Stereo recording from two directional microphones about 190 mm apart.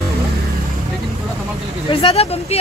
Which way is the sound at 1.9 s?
30° left (ahead or behind).